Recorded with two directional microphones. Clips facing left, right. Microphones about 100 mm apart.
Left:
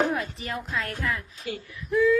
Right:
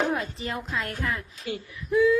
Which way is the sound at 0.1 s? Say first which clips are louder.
Right 1 dB; 25° right (ahead or behind).